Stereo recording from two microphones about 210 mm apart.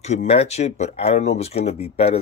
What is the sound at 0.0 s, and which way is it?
Speech, 30° left (ahead or behind).